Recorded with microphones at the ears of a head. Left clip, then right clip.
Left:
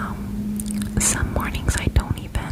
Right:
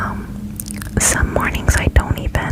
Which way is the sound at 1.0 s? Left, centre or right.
Right.